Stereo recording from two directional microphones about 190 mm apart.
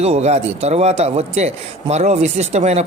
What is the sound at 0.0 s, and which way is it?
Speech, 35° right (ahead or behind).